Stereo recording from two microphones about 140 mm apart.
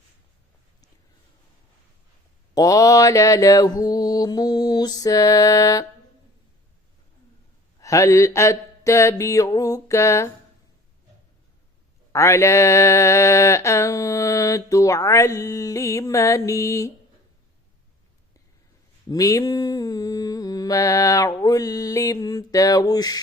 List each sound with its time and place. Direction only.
2.6 s mantra: 25° left (ahead or behind)
7.8 s mantra: 25° left (ahead or behind)
12.1 s mantra: 20° left (ahead or behind)
19.1 s mantra: 25° left (ahead or behind)